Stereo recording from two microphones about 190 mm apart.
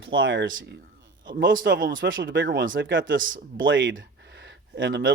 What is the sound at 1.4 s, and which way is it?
Speech, 50° right (ahead or behind).